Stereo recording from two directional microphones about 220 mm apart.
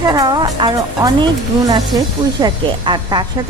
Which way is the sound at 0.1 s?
20° right (ahead or behind).